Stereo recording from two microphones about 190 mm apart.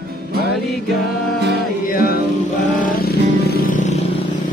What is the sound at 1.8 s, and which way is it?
Music, 50° left (ahead or behind).